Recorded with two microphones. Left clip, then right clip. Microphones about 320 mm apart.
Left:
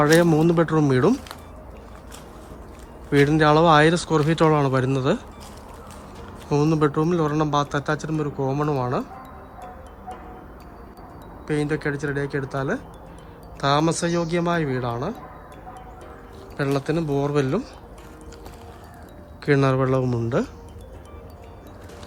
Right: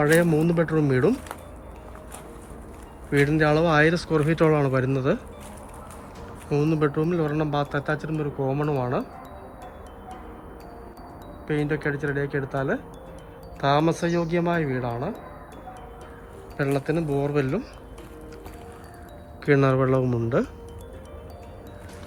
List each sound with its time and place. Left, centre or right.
0.0 s speech: centre
3.1 s speech: centre
6.5 s speech: centre
11.4 s speech: centre
16.6 s speech: centre
19.5 s speech: centre